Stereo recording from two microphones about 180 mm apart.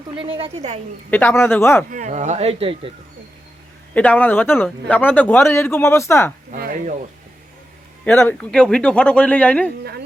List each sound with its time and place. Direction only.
0.2 s speech: 30° right (ahead or behind)
1.1 s a man's voice: 10° left (ahead or behind)
1.9 s speech: 45° right (ahead or behind)
3.9 s a man's voice: 10° left (ahead or behind)
6.5 s a sound: 50° right (ahead or behind)
8.0 s a man's voice: 10° left (ahead or behind)